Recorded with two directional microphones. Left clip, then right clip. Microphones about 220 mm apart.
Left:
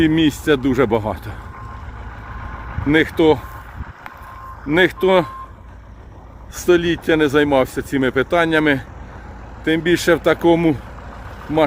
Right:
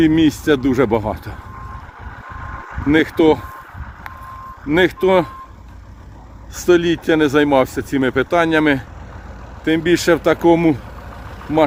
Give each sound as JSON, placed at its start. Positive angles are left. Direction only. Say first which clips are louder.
{"t": 0.0, "sound": "speech", "louder": "right 2 dB", "side_deg": 0}
{"t": 2.2, "sound": "vehicle", "louder": "right 3 dB", "side_deg": 50}
{"t": 2.9, "sound": "speech", "louder": "right 1 dB", "side_deg": 0}
{"t": 4.7, "sound": "speech", "louder": "even", "side_deg": 0}
{"t": 6.6, "sound": "speech", "louder": "right 1 dB", "side_deg": 0}